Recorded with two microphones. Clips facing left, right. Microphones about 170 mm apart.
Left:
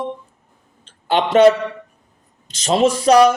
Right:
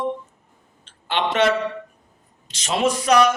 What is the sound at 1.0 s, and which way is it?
Speech, 40° left (ahead or behind).